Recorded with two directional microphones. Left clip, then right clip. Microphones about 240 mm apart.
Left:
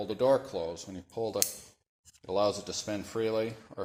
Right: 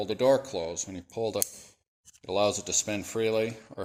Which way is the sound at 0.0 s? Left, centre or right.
Right.